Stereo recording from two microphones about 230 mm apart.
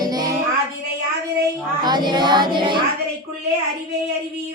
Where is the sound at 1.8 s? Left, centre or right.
Centre.